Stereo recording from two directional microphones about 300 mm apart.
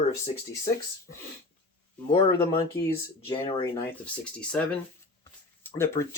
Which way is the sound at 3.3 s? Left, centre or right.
Centre.